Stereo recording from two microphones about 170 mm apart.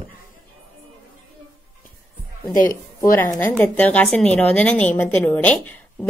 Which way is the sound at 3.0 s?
20° left (ahead or behind).